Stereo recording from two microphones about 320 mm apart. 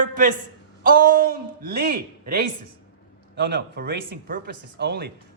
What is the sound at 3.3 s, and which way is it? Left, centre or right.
Speech, right.